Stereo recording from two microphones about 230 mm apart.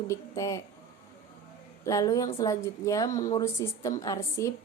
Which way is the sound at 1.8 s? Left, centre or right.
Centre.